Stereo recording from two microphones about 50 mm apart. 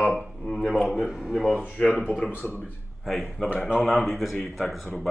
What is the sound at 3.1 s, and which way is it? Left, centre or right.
A man's voice, centre.